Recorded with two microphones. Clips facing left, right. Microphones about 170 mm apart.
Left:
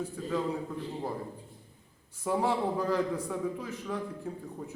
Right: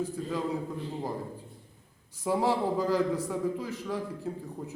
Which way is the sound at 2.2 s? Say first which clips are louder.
Right 2 dB; 10° right (ahead or behind).